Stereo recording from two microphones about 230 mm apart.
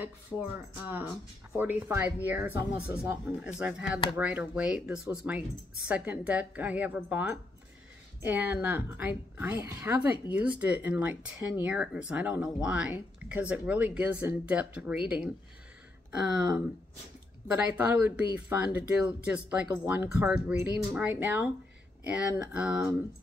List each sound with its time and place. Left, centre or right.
0.0 s speech: centre